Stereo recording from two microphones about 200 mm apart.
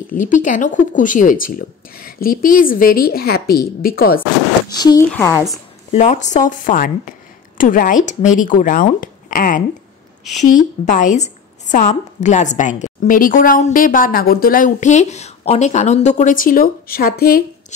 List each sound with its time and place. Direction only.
0.1 s speech: 40° left (ahead or behind)
4.7 s a woman's voice: 20° left (ahead or behind)
5.9 s a woman's voice: 35° left (ahead or behind)